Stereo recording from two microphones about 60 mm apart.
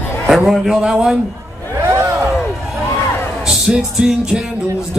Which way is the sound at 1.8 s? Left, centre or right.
Right.